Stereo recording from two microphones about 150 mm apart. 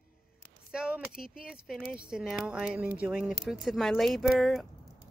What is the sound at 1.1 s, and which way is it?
Speech, 80° left.